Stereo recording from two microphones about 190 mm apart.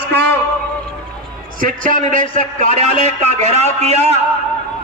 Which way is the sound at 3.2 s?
35° right (ahead or behind).